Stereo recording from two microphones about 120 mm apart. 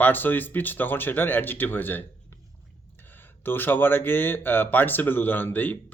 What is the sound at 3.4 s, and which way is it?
Speech, 15° left (ahead or behind).